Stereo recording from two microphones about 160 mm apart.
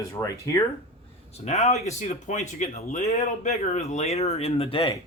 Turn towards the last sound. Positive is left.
turn(degrees=35)  # may be behind; listen again after turning